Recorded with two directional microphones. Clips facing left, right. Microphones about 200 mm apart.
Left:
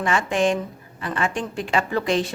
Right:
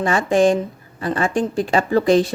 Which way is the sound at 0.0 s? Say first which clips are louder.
Right 5 dB; 35° right (ahead or behind).